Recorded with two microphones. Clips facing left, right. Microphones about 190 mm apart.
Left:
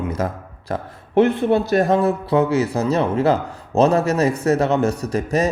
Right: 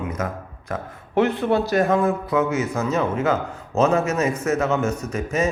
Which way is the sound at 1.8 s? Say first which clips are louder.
Left 2 dB; 35° left (ahead or behind).